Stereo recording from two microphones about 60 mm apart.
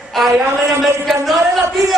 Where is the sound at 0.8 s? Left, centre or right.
Centre.